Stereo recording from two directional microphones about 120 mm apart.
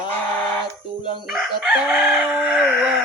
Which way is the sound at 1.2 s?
5° right (ahead or behind).